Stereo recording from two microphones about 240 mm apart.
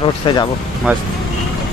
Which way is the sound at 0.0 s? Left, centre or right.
Centre.